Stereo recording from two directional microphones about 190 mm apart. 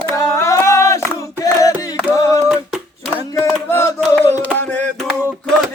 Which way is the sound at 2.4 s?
Centre (ahead or behind).